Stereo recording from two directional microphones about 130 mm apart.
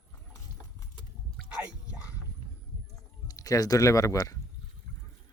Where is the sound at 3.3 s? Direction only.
25° left (ahead or behind).